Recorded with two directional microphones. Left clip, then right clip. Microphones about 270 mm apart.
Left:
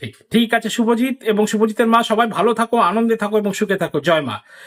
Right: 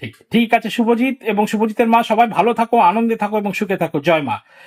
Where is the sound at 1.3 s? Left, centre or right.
Centre.